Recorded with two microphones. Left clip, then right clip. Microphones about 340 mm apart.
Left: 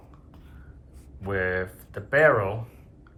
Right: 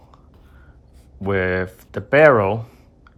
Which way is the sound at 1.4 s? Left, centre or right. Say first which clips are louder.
Right 5 dB; centre.